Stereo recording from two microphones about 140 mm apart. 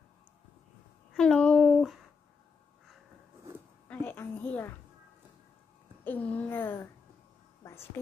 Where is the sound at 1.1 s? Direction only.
5° left (ahead or behind).